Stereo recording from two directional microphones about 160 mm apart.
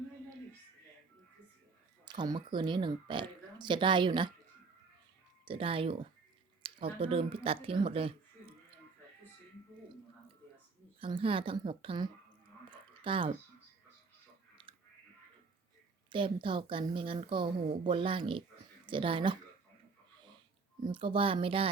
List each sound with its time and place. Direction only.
2.0 s speech: 25° right (ahead or behind)
5.5 s speech: 35° right (ahead or behind)
11.0 s speech: 35° right (ahead or behind)
12.7 s a sound: 30° right (ahead or behind)
14.6 s a sound: 30° right (ahead or behind)
16.0 s speech: 30° right (ahead or behind)
20.8 s speech: 30° right (ahead or behind)